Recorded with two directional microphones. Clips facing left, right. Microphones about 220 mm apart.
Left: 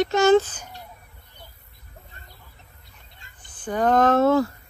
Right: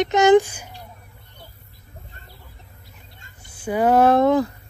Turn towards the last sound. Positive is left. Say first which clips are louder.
# right 2 dB
turn(degrees=-15)  # may be behind; listen again after turning